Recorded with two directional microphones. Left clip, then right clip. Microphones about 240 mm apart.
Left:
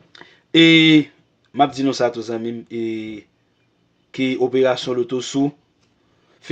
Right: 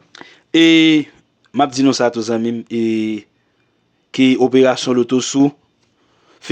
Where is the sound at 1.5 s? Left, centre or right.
Right.